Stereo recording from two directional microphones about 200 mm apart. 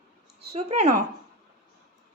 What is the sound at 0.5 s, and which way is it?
Speech, 35° right (ahead or behind).